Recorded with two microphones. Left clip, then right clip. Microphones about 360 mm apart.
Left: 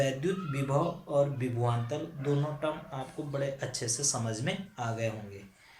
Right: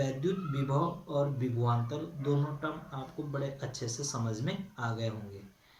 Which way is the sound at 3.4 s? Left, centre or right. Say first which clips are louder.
Left 4 dB; centre.